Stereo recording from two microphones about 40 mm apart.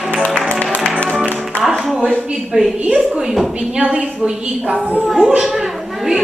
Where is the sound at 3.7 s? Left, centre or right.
Right.